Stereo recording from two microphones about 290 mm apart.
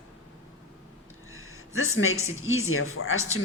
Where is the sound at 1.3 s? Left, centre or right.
Left.